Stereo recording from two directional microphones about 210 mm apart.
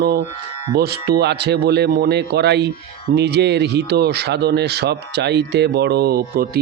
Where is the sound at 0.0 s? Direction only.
50° right (ahead or behind).